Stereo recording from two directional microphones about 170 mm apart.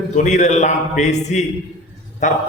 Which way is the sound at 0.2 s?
45° left (ahead or behind).